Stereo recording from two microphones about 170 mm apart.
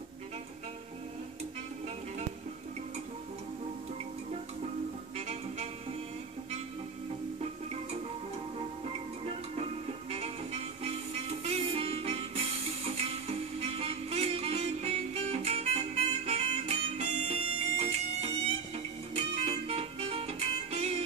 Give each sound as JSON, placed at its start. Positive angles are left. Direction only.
{"t": 5.1, "sound": "music", "side_deg": -40}
{"t": 10.1, "sound": "music", "side_deg": -35}